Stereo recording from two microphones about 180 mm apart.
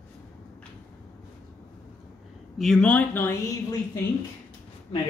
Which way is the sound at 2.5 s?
Centre (ahead or behind).